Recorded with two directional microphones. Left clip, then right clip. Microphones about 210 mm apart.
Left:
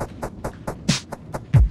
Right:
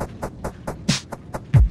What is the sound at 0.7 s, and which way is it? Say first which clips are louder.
Beatboxing: even; 15° right (ahead or behind).